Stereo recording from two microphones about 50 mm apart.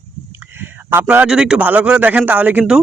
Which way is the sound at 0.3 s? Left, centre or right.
Right.